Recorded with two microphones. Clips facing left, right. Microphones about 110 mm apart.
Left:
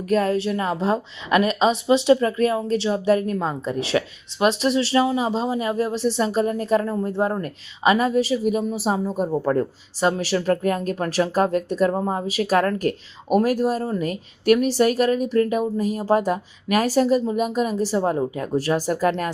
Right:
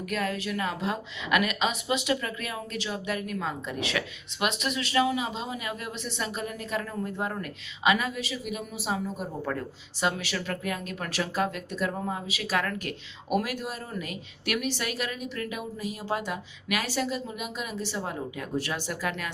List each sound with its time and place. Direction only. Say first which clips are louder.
0.0 s a woman's voice: left 10 dB; 35° left (ahead or behind)